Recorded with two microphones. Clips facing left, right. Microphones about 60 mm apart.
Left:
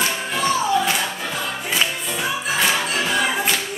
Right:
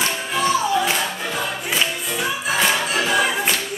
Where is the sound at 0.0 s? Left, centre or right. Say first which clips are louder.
Right 1 dB; centre.